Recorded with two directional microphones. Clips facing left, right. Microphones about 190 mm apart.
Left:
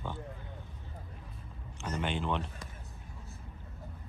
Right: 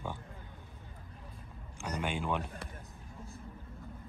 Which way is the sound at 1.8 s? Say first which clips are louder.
Left 1 dB; 10° right (ahead or behind).